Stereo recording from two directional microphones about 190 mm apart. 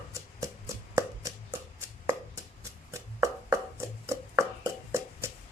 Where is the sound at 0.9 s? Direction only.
15° right (ahead or behind).